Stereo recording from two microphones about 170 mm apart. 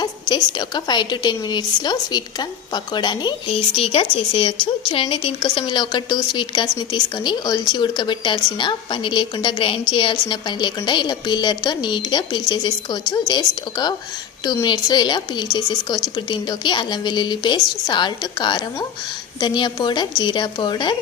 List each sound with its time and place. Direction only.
0.0 s a woman's voice: 25° left (ahead or behind)